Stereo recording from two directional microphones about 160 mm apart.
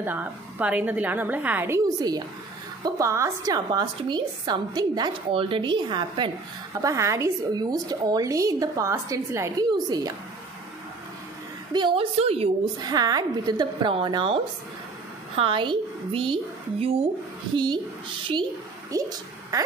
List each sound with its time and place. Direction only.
0.0 s a woman's voice: 10° right (ahead or behind)
2.0 s a woman's voice: 25° right (ahead or behind)
6.8 s a woman's voice: 20° right (ahead or behind)
11.7 s a woman's voice: 30° right (ahead or behind)
12.7 s a woman's voice: 25° right (ahead or behind)
18.9 s speech: 20° right (ahead or behind)